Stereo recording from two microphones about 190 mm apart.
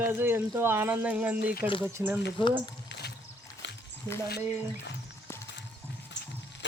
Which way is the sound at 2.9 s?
60° left (ahead or behind).